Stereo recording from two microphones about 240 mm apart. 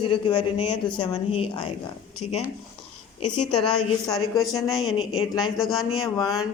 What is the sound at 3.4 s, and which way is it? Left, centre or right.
A woman's voice, centre.